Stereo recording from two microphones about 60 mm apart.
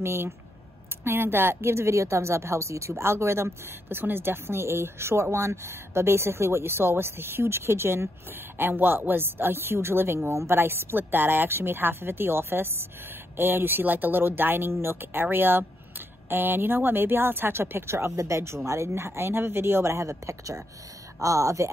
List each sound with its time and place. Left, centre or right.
0.0 s a woman's voice: right
18.1 s speech: right